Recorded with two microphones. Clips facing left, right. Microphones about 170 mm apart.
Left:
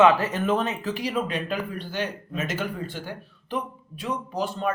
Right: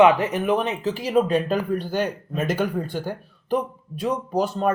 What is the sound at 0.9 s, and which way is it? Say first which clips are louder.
Speech: right 7 dB; 35° right (ahead or behind).